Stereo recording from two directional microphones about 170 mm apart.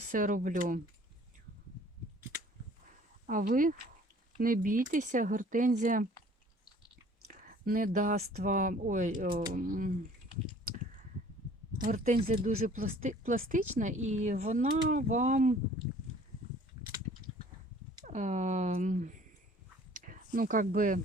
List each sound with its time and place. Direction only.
0.1 s speech: 50° right (ahead or behind)
3.2 s speech: 55° right (ahead or behind)
7.3 s speech: 55° right (ahead or behind)
11.8 s speech: 55° right (ahead or behind)
18.0 s speech: 45° right (ahead or behind)
19.9 s a sound: 50° right (ahead or behind)